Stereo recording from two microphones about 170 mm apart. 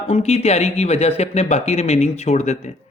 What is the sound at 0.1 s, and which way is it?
Speech, 35° left (ahead or behind).